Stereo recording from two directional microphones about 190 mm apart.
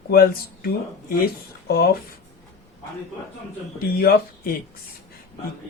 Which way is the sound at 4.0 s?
50° left (ahead or behind).